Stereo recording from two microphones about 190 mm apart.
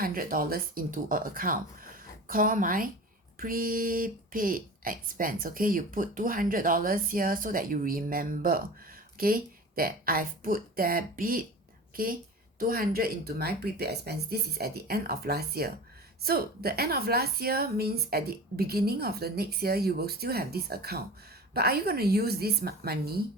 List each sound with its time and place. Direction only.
0.0 s a woman's voice: 50° right (ahead or behind)